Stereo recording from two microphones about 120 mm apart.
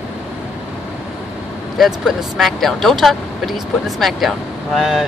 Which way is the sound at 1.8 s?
5° right (ahead or behind).